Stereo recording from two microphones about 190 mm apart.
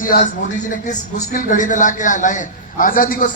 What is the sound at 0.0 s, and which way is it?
A man's voice, 45° left (ahead or behind).